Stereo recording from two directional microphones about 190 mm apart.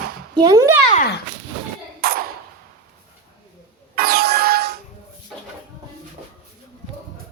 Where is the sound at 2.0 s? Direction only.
55° right (ahead or behind).